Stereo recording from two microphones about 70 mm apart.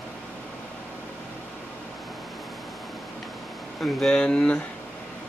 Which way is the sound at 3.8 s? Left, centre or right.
Centre.